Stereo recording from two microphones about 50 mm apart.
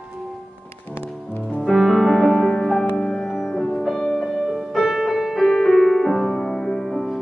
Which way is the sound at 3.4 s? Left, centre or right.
Centre.